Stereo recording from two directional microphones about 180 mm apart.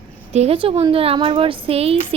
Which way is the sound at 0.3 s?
35° right (ahead or behind).